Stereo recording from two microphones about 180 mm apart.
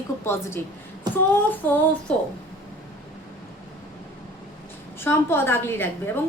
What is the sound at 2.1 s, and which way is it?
Speech, 10° left (ahead or behind).